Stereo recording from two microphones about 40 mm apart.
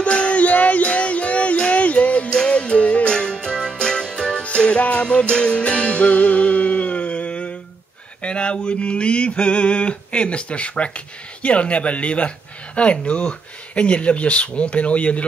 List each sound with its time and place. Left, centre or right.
0.1 s music: left
8.2 s mantra: left
11.4 s speech: left